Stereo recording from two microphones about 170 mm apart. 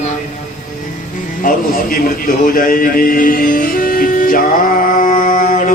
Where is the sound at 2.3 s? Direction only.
60° left (ahead or behind).